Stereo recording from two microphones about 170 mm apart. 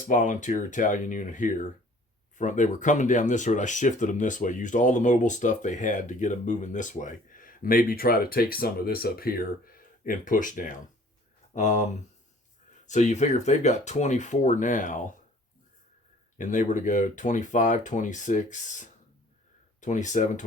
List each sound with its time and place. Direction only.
0.1 s speech: 50° left (ahead or behind)
16.4 s speech: 50° left (ahead or behind)